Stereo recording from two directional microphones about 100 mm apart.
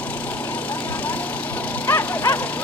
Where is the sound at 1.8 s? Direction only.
20° left (ahead or behind).